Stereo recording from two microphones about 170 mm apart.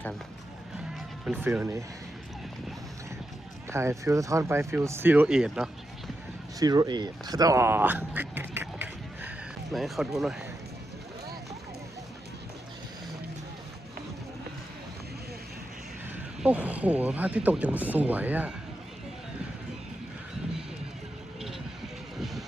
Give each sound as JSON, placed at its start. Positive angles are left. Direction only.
{"t": 1.2, "sound": "speech", "side_deg": -10}
{"t": 3.7, "sound": "speech", "side_deg": -15}
{"t": 6.6, "sound": "speech", "side_deg": -20}
{"t": 9.7, "sound": "speech", "side_deg": 0}
{"t": 16.4, "sound": "speech", "side_deg": -10}
{"t": 22.2, "sound": "vehicle", "side_deg": 0}